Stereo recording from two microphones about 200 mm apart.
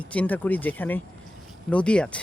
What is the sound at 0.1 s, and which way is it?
Speech, 10° left (ahead or behind).